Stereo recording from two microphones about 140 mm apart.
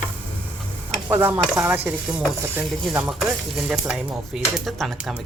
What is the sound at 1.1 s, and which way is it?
Speech, 15° right (ahead or behind).